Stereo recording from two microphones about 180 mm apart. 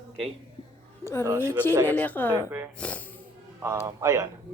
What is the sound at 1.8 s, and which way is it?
Speech, 10° left (ahead or behind).